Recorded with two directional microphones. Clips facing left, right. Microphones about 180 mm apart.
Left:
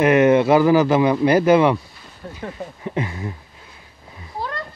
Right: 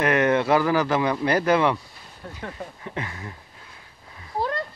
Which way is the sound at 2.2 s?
5° left (ahead or behind).